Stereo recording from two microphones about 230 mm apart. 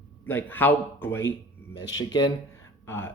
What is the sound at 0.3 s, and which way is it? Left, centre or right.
Speech, centre.